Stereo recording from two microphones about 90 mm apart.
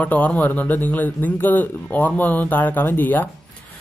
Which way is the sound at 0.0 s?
15° left (ahead or behind).